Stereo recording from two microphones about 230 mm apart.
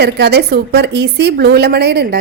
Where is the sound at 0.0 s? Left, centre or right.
Right.